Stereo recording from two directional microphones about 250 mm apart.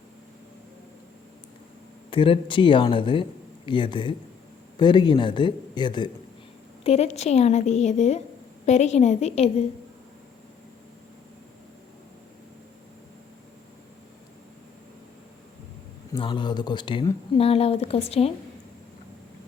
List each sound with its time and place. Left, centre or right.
2.0 s speech: left
16.1 s speech: centre